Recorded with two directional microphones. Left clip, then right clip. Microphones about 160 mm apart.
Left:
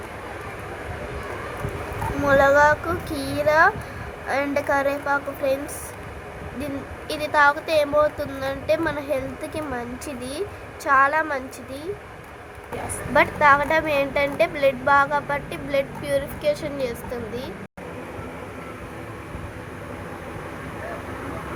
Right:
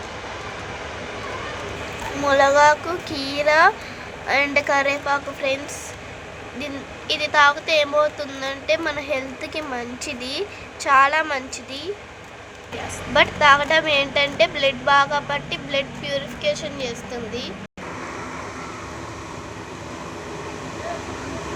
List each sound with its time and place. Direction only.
2.2 s a woman's voice: 5° left (ahead or behind)
7.1 s a woman's voice: 15° left (ahead or behind)
13.1 s a woman's voice: 10° left (ahead or behind)